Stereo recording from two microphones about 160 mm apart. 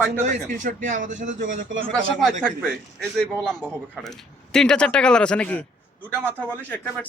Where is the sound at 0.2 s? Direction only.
50° right (ahead or behind).